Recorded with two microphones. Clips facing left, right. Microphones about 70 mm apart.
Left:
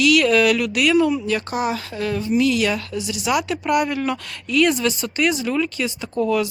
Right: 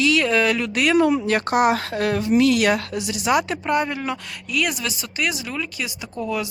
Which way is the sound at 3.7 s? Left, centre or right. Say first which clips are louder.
Left 4 dB; right.